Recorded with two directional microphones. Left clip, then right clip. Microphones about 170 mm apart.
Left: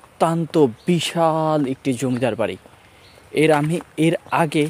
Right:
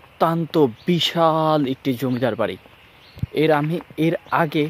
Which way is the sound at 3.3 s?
15° left (ahead or behind).